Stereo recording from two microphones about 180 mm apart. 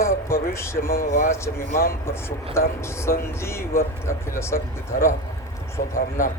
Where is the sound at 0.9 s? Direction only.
45° left (ahead or behind).